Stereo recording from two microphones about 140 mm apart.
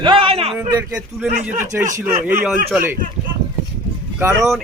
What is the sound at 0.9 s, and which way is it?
Speech, 5° right (ahead or behind).